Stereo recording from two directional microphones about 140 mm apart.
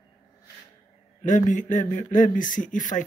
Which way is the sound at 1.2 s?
65° left (ahead or behind).